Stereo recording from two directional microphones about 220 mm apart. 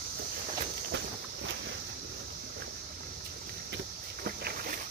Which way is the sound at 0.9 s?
55° right (ahead or behind).